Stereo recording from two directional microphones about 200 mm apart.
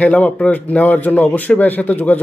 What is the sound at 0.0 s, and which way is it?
A man's voice, 10° left (ahead or behind).